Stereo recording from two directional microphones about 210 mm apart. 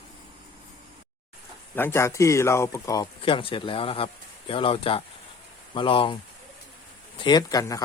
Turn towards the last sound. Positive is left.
turn(degrees=15)  # may be behind; listen again after turning